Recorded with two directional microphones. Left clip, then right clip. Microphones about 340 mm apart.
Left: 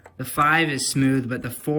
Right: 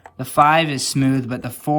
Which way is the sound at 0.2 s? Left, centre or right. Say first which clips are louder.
Right 5 dB; centre.